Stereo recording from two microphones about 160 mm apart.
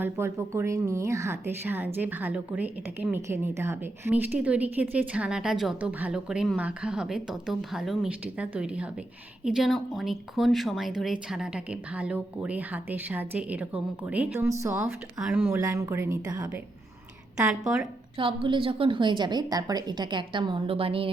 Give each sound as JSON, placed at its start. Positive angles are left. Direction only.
{"t": 0.0, "sound": "a woman's voice", "side_deg": -15}
{"t": 17.3, "sound": "a woman's voice", "side_deg": -5}
{"t": 18.2, "sound": "a woman's voice", "side_deg": -35}